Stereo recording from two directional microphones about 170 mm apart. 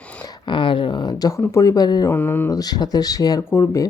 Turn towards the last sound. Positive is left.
turn(degrees=15)  # may be behind; listen again after turning